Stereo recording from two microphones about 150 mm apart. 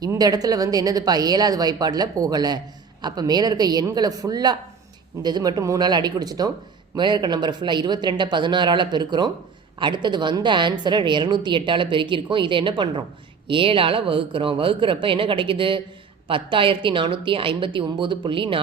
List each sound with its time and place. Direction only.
0.0 s a woman's voice: 25° right (ahead or behind)